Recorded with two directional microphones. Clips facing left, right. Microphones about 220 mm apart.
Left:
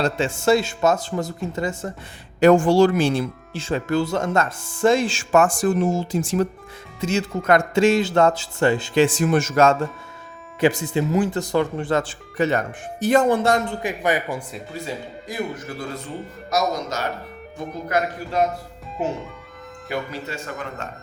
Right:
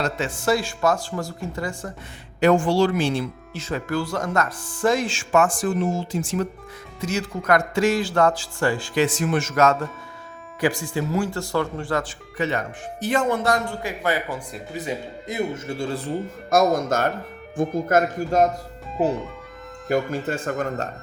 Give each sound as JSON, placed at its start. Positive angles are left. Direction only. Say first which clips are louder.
{"t": 0.0, "sound": "a man's voice", "louder": "left 4 dB", "side_deg": 25}
{"t": 2.4, "sound": "speech", "louder": "left 4 dB", "side_deg": 45}
{"t": 3.5, "sound": "a man's voice", "louder": "left 4 dB", "side_deg": 30}
{"t": 7.0, "sound": "a man's voice", "louder": "left 3 dB", "side_deg": 25}
{"t": 10.6, "sound": "a man's voice", "louder": "left 4 dB", "side_deg": 20}
{"t": 12.4, "sound": "a man's voice", "louder": "left 4 dB", "side_deg": 45}
{"t": 14.7, "sound": "speech", "louder": "right 3 dB", "side_deg": -20}
{"t": 16.5, "sound": "speech", "louder": "right 5 dB", "side_deg": -50}
{"t": 19.9, "sound": "speech", "louder": "right 6 dB", "side_deg": -50}